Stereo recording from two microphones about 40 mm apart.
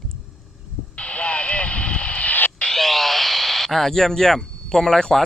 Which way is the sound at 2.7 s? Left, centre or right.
Centre.